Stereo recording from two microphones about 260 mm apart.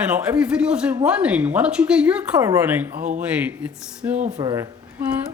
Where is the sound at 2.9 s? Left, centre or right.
Right.